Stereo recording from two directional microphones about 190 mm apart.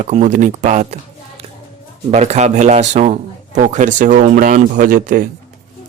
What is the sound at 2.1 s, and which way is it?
A man's voice, 35° right (ahead or behind).